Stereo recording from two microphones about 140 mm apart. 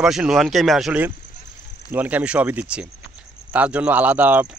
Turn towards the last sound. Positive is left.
turn(degrees=-10)  # may be behind; listen again after turning